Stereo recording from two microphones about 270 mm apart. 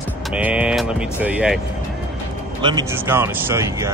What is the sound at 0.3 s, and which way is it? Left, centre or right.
Speech, centre.